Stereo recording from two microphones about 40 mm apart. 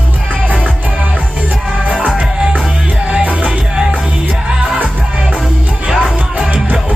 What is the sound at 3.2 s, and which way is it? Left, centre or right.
Music, right.